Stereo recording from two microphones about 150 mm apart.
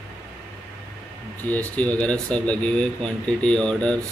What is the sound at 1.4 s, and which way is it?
Speech, 10° left (ahead or behind).